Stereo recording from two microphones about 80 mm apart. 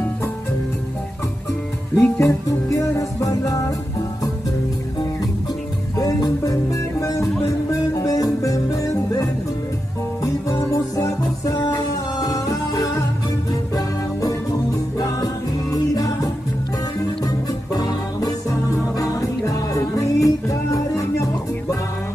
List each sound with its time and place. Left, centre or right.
2.0 s music: left
5.9 s music: left
10.7 s music: left
15.0 s music: left
17.7 s music: left